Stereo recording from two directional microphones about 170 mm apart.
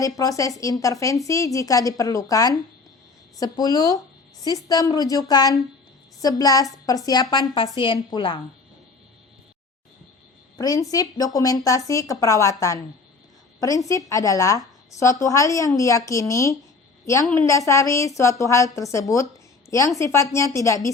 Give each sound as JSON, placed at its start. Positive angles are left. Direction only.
{"t": 0.2, "sound": "a woman's voice", "side_deg": 20}
{"t": 10.6, "sound": "a woman's voice", "side_deg": 20}